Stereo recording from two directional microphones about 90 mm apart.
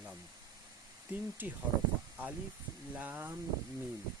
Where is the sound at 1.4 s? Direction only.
20° right (ahead or behind).